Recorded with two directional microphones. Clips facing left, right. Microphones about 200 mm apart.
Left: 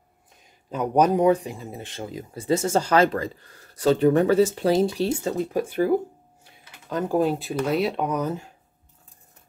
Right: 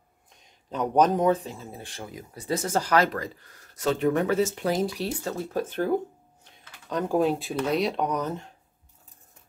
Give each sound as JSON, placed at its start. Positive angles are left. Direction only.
{"t": 0.4, "sound": "speech", "side_deg": 5}
{"t": 6.4, "sound": "a sound", "side_deg": 5}
{"t": 7.5, "sound": "speech", "side_deg": 5}